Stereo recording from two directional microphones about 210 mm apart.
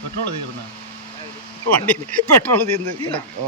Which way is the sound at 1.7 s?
5° left (ahead or behind).